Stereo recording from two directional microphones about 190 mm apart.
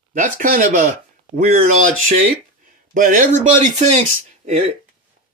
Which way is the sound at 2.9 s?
45° right (ahead or behind).